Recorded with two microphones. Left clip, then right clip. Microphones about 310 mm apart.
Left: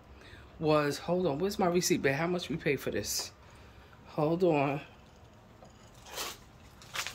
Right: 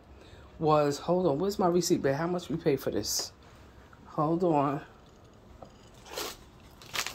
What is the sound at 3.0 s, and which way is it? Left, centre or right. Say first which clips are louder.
Speech: right 3 dB; centre.